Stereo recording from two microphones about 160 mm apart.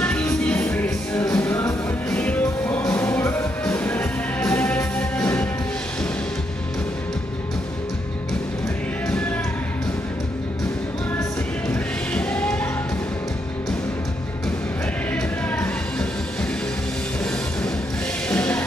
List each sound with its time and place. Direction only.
0.0 s music: 5° left (ahead or behind)
4.6 s music: 5° left (ahead or behind)
9.0 s music: 5° left (ahead or behind)
12.1 s music: 5° left (ahead or behind)
15.1 s music: 5° left (ahead or behind)
18.3 s music: 10° left (ahead or behind)